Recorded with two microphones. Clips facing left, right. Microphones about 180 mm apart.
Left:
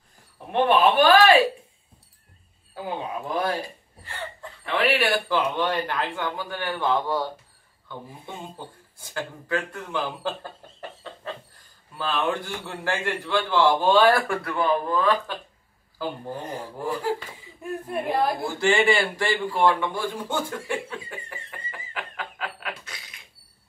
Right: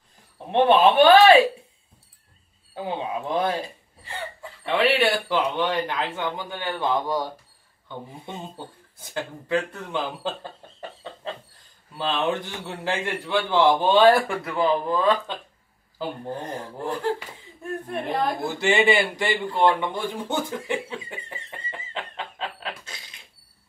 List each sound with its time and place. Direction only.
0.5 s speech: 25° right (ahead or behind)
2.7 s speech: 20° right (ahead or behind)
16.3 s speech: 10° left (ahead or behind)
18.4 s speech: 20° right (ahead or behind)